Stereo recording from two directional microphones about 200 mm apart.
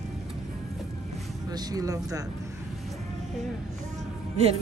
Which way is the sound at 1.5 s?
20° right (ahead or behind).